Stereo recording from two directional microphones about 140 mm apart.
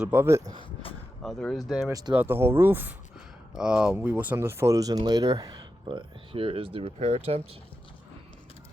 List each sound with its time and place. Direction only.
0.0 s speech: 15° right (ahead or behind)
0.6 s a sound: 40° left (ahead or behind)
1.2 s speech: 5° left (ahead or behind)
1.9 s speech: 25° right (ahead or behind)
2.1 s speech: 15° right (ahead or behind)
3.5 s speech: 5° right (ahead or behind); by 7.4 s 45° right (ahead or behind)